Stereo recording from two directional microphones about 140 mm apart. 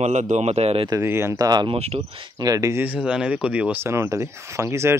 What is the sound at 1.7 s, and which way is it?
Speech, 45° right (ahead or behind).